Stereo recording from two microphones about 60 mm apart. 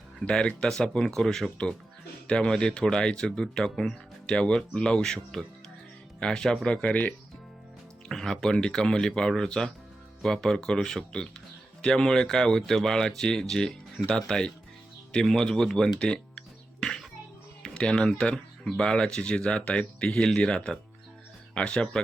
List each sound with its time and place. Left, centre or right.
0.3 s speech: centre
8.0 s speech: centre
16.8 s music: centre
17.6 s speech: centre